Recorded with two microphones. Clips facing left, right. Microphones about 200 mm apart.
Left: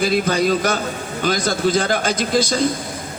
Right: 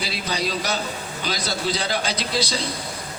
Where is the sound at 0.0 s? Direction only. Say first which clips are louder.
Left 10 dB; 50° left (ahead or behind).